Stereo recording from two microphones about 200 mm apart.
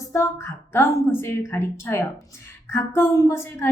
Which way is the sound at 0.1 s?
15° left (ahead or behind).